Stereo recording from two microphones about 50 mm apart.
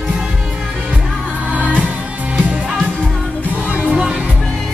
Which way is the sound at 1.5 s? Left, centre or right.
Right.